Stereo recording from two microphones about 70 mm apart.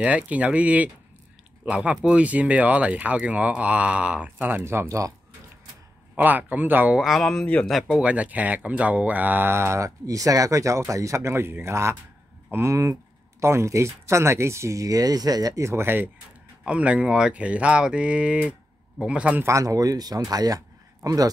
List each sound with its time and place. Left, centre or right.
0.0 s speech: centre
4.8 s speech: right
6.1 s speech: right
7.0 s speech: centre
7.4 s speech: centre
8.0 s speech: centre; by 15.6 s right
15.6 s speech: right
16.6 s speech: centre
19.4 s speech: right